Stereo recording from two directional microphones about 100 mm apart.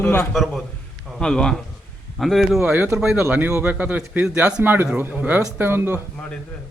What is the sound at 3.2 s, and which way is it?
A man's voice, 20° right (ahead or behind).